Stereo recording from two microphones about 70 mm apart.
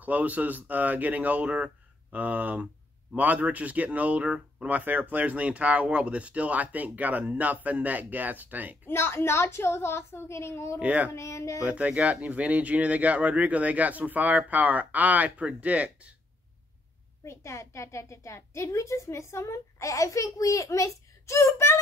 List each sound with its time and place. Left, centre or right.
0.0 s speech: right
8.8 s speech: left
10.8 s speech: centre
11.1 s a woman's voice: left
11.6 s speech: centre
17.2 s a woman's voice: left